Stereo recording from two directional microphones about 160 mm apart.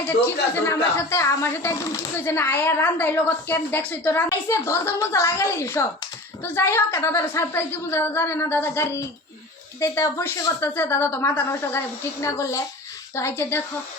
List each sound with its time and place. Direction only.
0.0 s speech: 15° left (ahead or behind)